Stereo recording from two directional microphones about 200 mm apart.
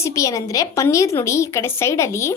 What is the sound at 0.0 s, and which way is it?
A child's voice, 15° left (ahead or behind).